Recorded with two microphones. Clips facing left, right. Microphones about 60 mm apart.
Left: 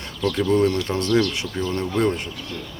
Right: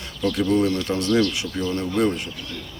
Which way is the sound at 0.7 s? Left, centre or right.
Left.